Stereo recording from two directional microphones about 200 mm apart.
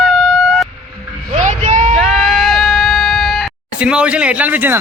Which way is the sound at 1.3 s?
35° right (ahead or behind).